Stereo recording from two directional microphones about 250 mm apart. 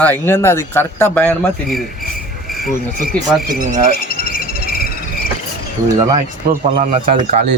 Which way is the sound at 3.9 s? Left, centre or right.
Left.